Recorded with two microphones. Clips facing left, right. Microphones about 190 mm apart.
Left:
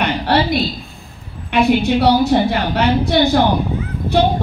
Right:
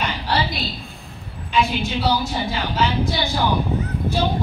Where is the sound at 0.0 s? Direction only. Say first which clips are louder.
Left 7 dB; 55° left (ahead or behind).